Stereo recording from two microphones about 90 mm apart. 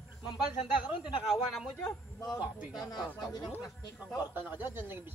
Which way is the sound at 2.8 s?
50° left (ahead or behind).